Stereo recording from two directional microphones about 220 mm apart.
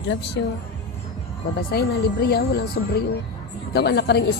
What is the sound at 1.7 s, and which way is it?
Speech, 50° left (ahead or behind).